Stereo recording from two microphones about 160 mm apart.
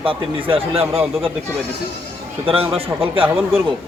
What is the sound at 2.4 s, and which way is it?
Speech, 35° right (ahead or behind).